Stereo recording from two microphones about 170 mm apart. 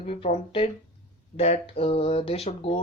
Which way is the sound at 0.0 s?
35° left (ahead or behind).